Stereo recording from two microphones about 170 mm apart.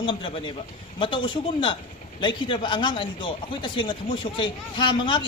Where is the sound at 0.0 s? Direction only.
30° left (ahead or behind).